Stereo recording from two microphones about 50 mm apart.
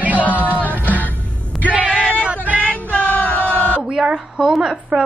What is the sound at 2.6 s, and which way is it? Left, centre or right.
Music, left.